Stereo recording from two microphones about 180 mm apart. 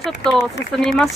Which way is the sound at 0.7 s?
5° left (ahead or behind).